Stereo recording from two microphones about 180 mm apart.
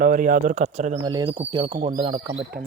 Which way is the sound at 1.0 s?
25° right (ahead or behind).